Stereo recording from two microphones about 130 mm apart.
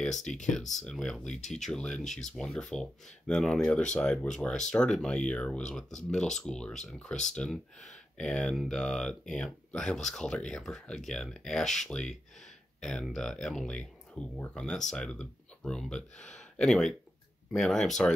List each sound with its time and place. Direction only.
0.0 s speech: 5° left (ahead or behind)
2.0 s speech: 70° left (ahead or behind)
2.3 s speech: 5° left (ahead or behind)